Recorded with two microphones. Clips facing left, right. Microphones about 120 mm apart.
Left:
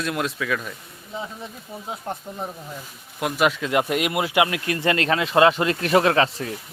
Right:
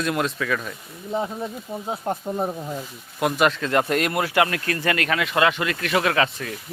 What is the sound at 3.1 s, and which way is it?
Speech, centre (ahead or behind).